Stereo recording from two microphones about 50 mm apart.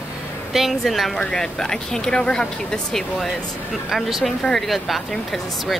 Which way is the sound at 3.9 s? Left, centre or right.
Centre.